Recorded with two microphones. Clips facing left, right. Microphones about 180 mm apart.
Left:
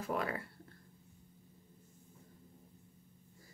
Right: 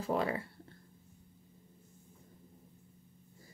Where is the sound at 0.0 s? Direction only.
25° right (ahead or behind).